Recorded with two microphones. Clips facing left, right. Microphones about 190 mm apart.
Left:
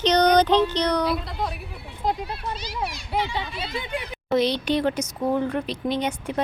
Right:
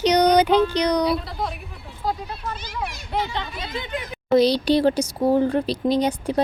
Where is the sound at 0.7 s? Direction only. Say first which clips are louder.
Right 3 dB; 10° right (ahead or behind).